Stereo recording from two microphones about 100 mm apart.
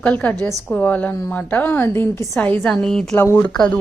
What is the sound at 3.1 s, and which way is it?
Speech, 25° left (ahead or behind).